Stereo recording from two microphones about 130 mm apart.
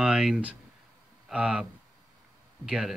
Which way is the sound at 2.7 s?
5° right (ahead or behind).